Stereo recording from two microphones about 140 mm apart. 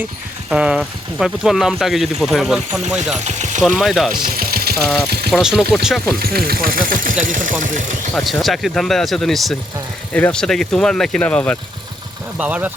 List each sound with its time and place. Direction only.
0.5 s speech: 5° right (ahead or behind)
3.2 s speech: 60° right (ahead or behind)
3.6 s speech: 5° right (ahead or behind)
4.1 s speech: 85° right
4.8 s speech: centre (ahead or behind)
6.1 s speech: 90° right; by 7.9 s 65° right (ahead or behind)
8.1 s speech: centre (ahead or behind)
12.4 s speech: 10° right (ahead or behind)